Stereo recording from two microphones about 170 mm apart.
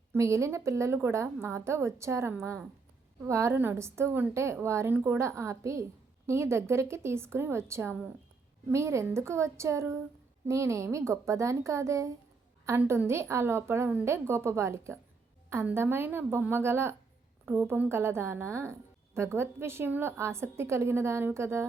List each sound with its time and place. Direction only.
0.1 s a woman's voice: 15° right (ahead or behind)